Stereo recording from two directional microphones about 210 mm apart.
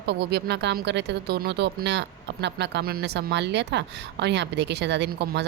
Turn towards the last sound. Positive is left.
turn(degrees=-55)  # may be behind; listen again after turning